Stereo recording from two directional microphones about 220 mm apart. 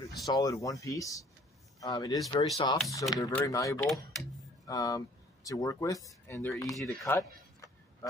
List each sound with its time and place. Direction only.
0.2 s speech: 15° left (ahead or behind)
2.1 s speech: centre (ahead or behind)
2.5 s speech: 20° left (ahead or behind)
3.8 s speech: centre (ahead or behind)
4.6 s speech: 15° left (ahead or behind)
6.8 s speech: centre (ahead or behind)
7.2 s a sound: 15° left (ahead or behind)